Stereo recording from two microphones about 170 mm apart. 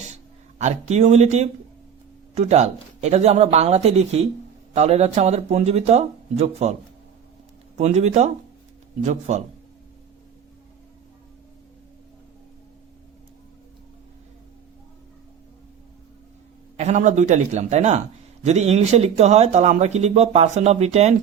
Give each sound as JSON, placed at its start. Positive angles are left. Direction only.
{"t": 0.6, "sound": "speech", "side_deg": -40}
{"t": 7.8, "sound": "speech", "side_deg": -40}
{"t": 16.7, "sound": "speech", "side_deg": -40}